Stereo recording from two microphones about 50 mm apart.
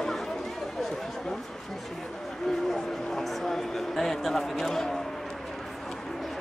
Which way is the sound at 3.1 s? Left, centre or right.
Centre.